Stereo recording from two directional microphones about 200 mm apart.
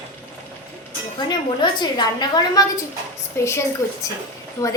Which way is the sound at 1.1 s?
20° left (ahead or behind).